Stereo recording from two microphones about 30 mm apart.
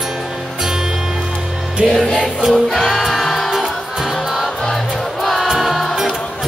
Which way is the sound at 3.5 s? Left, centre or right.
Centre.